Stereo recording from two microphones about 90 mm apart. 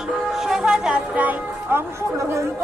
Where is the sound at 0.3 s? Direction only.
5° right (ahead or behind).